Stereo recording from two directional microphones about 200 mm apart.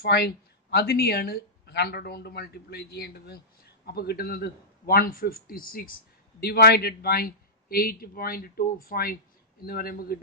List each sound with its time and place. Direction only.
0.0 s speech: 55° left (ahead or behind)